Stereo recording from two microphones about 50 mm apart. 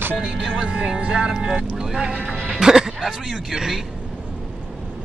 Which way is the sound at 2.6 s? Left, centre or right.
Centre.